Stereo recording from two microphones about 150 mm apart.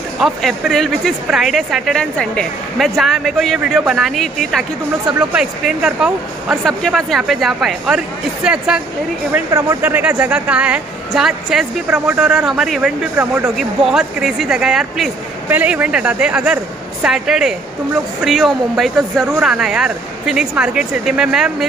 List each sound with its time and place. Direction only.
0.2 s a woman's voice: centre (ahead or behind)